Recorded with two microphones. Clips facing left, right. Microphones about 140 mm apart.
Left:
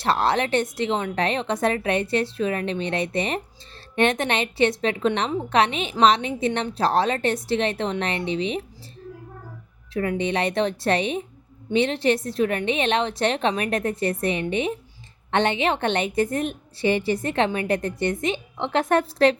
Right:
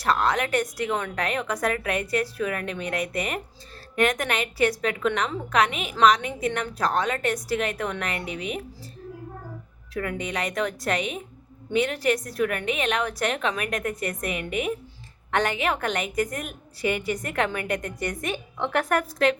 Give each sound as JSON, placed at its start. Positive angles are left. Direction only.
{"t": 0.0, "sound": "a woman's voice", "side_deg": 30}
{"t": 9.9, "sound": "a woman's voice", "side_deg": 30}